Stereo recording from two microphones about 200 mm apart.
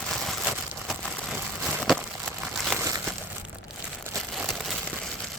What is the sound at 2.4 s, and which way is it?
Crumpling, 5° right (ahead or behind).